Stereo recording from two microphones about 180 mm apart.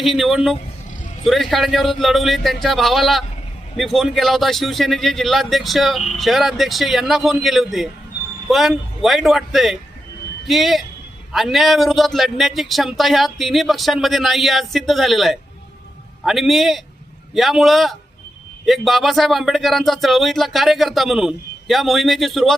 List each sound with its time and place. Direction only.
0.0 s speech: centre (ahead or behind)